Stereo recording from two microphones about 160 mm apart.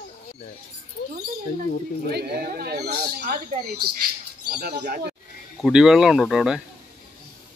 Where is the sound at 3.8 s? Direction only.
75° right (ahead or behind).